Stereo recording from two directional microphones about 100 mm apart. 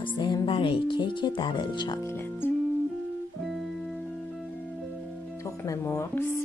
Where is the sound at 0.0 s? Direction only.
50° left (ahead or behind).